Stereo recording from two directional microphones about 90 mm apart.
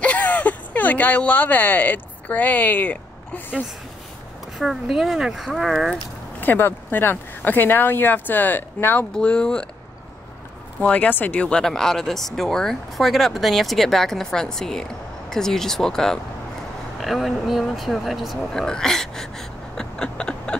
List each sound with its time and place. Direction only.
0.0 s speech: 15° left (ahead or behind)
4.6 s speech: centre (ahead or behind)
6.4 s speech: 20° left (ahead or behind)
9.1 s speech: 10° left (ahead or behind)
10.8 s speech: 15° left (ahead or behind)